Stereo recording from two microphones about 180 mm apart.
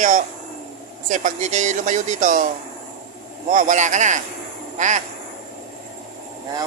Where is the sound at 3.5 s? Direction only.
45° right (ahead or behind).